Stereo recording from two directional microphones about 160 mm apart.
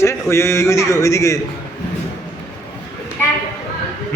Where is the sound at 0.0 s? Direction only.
15° left (ahead or behind).